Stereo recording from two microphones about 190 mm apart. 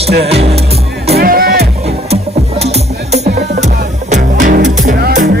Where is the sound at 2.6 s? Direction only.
35° right (ahead or behind).